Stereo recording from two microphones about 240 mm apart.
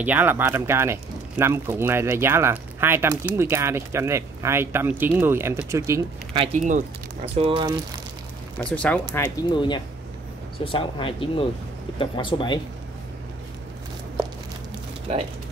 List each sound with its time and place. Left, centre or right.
0.0 s speech: centre
6.4 s speech: right
8.5 s speech: centre
9.4 s speech: centre